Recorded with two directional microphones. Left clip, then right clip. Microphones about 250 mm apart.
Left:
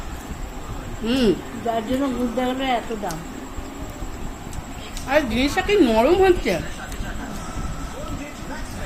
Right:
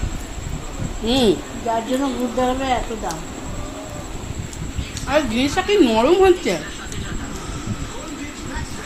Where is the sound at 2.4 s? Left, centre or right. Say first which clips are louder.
Right 3 dB; centre.